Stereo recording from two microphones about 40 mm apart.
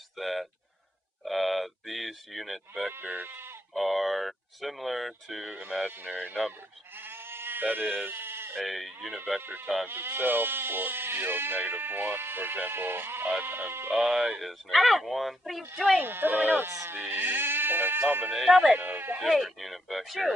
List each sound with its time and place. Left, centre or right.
0.2 s speech: centre
3.0 s speech: right
3.3 s sheep: right
3.7 s speech: centre
7.0 s sheep: right
7.6 s speech: right
8.5 s speech: centre
9.4 s speech: right
13.4 s speech: right
13.9 s speech: centre
16.0 s speech: right
18.4 s speech: centre
18.8 s speech: right
19.3 s speech: centre